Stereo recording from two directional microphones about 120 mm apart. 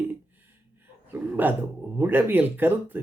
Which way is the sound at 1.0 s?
15° right (ahead or behind).